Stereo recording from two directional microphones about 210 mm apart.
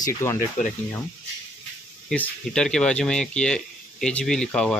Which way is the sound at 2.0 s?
5° left (ahead or behind).